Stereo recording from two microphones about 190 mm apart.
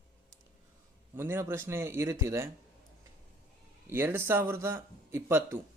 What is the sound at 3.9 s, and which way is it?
Speech, 10° right (ahead or behind).